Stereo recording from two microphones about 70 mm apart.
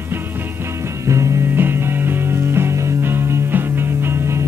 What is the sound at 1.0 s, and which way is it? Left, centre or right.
Music, right.